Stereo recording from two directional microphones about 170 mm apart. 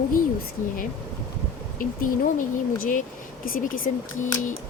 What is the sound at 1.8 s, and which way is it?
A woman's voice, 55° left (ahead or behind).